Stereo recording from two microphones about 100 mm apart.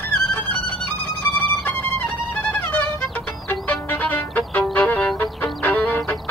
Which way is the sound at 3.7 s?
15° left (ahead or behind).